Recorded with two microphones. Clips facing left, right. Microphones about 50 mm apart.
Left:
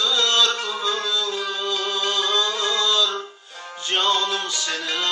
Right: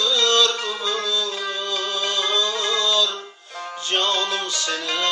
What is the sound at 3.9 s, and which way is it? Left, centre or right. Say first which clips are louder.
Music: left 1 dB; centre.